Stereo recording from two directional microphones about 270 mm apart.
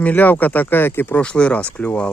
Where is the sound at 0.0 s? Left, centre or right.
Centre.